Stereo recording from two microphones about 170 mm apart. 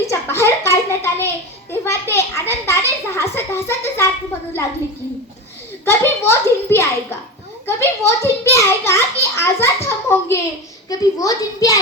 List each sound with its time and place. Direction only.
0.1 s a child's voice: 15° left (ahead or behind)
5.8 s a child's voice: 15° left (ahead or behind)